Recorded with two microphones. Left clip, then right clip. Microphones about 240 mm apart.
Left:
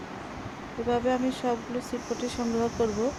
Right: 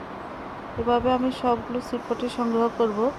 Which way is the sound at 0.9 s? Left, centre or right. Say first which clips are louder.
Right 4 dB; centre.